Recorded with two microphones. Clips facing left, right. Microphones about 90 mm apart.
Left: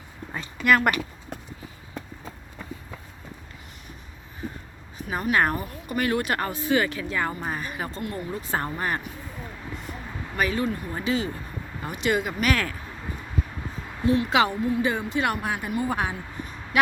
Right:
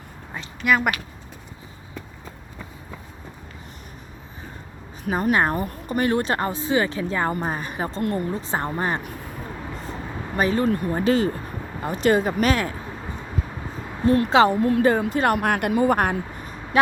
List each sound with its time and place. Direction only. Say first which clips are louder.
0.3 s a sound: even; centre (ahead or behind)
5.3 s speech: right 1 dB; 25° right (ahead or behind)
5.5 s speech: right 5 dB; 45° right (ahead or behind)
6.0 s speech: right 3 dB; 30° right (ahead or behind)
8.0 s speech: right 11 dB; 50° right (ahead or behind)
8.3 s speech: right 3 dB; 25° right (ahead or behind)
9.7 s vehicle: right 4 dB; 30° right (ahead or behind)
10.7 s speech: right 7 dB; 55° right (ahead or behind)
11.8 s speech: right 6 dB; 35° right (ahead or behind)
14.0 s a woman's voice: right 4 dB; 45° right (ahead or behind)
14.3 s speech: right 8 dB; 35° right (ahead or behind)
14.6 s speech: right 6 dB; 55° right (ahead or behind)
15.4 s a woman's voice: right 7 dB; 75° right (ahead or behind)
16.7 s speech: right 3 dB; 35° right (ahead or behind)